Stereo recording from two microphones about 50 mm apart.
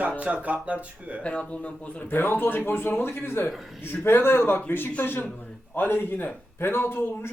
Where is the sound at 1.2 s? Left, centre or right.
Left.